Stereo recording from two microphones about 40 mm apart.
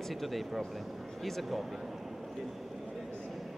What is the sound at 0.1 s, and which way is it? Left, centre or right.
Speech, centre.